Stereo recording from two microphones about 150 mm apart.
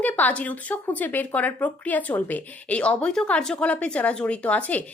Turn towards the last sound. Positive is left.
turn(degrees=10)  # may be behind; listen again after turning